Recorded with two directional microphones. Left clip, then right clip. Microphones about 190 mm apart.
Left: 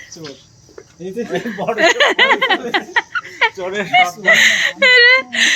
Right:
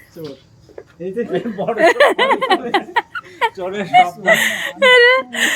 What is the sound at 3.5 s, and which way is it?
Speech, 55° right (ahead or behind).